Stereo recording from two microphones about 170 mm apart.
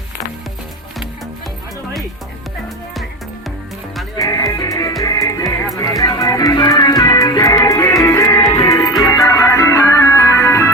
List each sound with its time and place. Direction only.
4.2 s music: 20° left (ahead or behind)
9.0 s organ: 20° left (ahead or behind)